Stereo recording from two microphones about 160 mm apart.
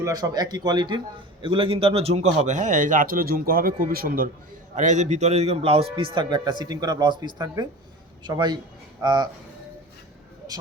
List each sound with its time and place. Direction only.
0.0 s a man's voice: 20° right (ahead or behind); by 4.3 s 65° right (ahead or behind)
4.7 s a man's voice: 50° right (ahead or behind); by 9.3 s 25° right (ahead or behind)